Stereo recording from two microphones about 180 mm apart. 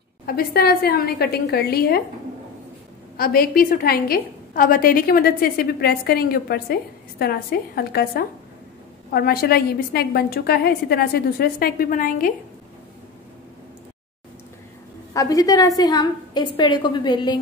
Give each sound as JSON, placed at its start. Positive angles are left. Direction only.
{"t": 0.3, "sound": "a woman's voice", "side_deg": 55}
{"t": 3.2, "sound": "a woman's voice", "side_deg": 55}
{"t": 15.1, "sound": "a woman's voice", "side_deg": 20}